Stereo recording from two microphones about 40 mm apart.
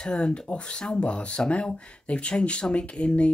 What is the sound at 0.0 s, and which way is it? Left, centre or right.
Speech, left.